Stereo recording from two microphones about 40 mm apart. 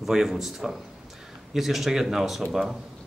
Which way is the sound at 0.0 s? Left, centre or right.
Centre.